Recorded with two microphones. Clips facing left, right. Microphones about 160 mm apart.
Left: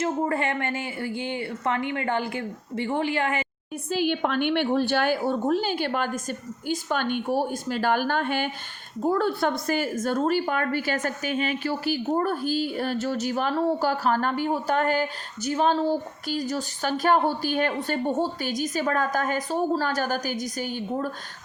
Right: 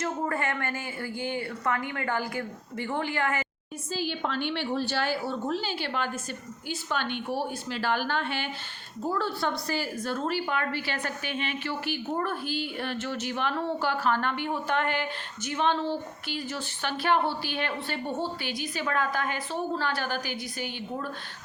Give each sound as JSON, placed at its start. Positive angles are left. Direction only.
{"t": 0.0, "sound": "a woman's voice", "side_deg": 25}
{"t": 3.8, "sound": "a woman's voice", "side_deg": 60}